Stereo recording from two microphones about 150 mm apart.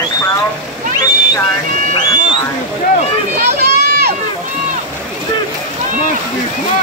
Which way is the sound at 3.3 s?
90° right.